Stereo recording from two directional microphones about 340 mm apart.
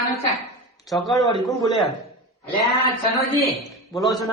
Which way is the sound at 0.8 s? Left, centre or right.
Centre.